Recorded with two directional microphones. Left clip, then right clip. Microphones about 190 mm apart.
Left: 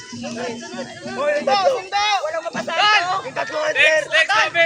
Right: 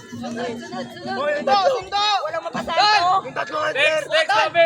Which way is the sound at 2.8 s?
60° right (ahead or behind).